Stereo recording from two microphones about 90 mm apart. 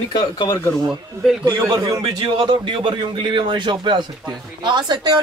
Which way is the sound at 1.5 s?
50° right (ahead or behind).